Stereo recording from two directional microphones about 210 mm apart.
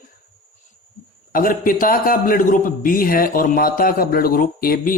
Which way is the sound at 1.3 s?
40° left (ahead or behind).